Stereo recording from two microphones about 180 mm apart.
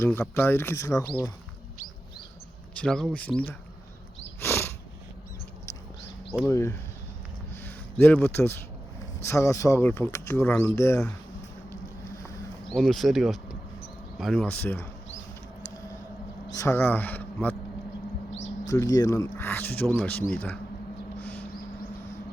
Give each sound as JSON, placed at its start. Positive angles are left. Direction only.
{"t": 0.0, "sound": "speech", "side_deg": 10}
{"t": 2.7, "sound": "speech", "side_deg": 5}
{"t": 4.4, "sound": "a sound", "side_deg": 15}
{"t": 6.4, "sound": "speech", "side_deg": 15}
{"t": 7.6, "sound": "a sound", "side_deg": 10}
{"t": 9.2, "sound": "speech", "side_deg": 15}
{"t": 12.7, "sound": "speech", "side_deg": 0}
{"t": 16.6, "sound": "speech", "side_deg": 15}
{"t": 18.7, "sound": "speech", "side_deg": 20}
{"t": 21.2, "sound": "a sound", "side_deg": 10}